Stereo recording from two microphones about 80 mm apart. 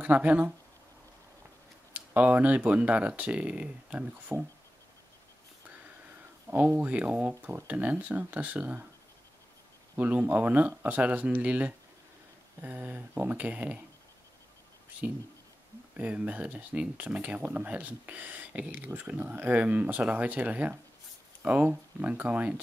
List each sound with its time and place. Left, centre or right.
0.0 s speech: centre
2.0 s speech: centre
6.5 s speech: right
9.9 s speech: centre
16.0 s speech: centre